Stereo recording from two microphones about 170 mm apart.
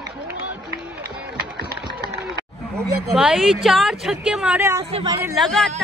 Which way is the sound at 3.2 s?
Centre (ahead or behind).